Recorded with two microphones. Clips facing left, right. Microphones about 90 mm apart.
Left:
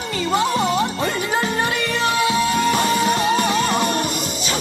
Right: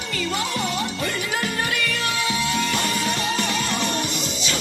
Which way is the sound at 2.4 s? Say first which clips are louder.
Left 6 dB; 40° left (ahead or behind).